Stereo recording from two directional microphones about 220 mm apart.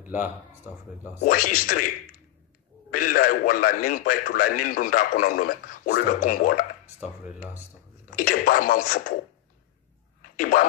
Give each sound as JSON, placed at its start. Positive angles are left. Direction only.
{"t": 0.0, "sound": "speech", "side_deg": -10}
{"t": 1.2, "sound": "a man's voice", "side_deg": 40}
{"t": 8.2, "sound": "a man's voice", "side_deg": 40}
{"t": 10.4, "sound": "a man's voice", "side_deg": 40}